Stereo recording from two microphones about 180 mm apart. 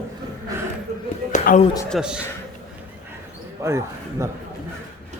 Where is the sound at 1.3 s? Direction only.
45° left (ahead or behind).